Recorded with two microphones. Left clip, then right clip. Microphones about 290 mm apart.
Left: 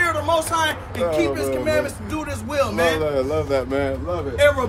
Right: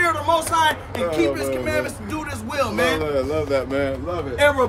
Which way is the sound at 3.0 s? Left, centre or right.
Centre.